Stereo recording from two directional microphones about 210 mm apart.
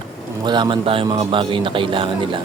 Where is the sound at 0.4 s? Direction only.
20° right (ahead or behind).